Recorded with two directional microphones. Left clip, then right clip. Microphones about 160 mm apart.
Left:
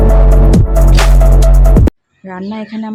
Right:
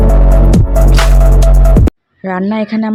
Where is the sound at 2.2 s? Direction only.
40° right (ahead or behind).